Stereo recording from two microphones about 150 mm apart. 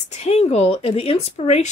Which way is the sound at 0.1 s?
45° left (ahead or behind).